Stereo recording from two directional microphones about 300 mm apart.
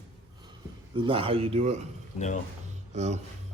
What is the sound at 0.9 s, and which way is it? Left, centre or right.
Speech, centre.